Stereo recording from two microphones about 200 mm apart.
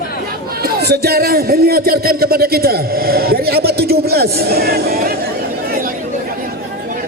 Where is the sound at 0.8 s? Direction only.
50° right (ahead or behind).